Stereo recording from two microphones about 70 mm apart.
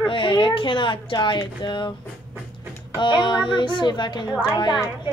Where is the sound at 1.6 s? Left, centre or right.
Left.